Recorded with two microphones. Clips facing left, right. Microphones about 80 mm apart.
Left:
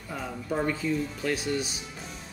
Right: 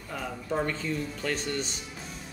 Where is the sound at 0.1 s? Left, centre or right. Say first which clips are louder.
Even; centre.